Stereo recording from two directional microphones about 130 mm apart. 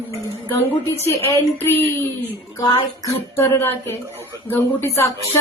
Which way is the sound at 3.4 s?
20° left (ahead or behind).